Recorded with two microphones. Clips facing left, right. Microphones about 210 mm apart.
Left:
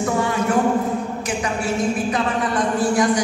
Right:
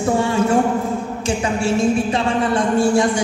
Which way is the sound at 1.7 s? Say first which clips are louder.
Right 5 dB; 25° right (ahead or behind).